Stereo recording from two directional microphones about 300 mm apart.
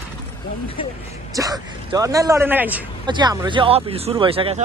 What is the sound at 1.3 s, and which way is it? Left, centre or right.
A man's voice, centre.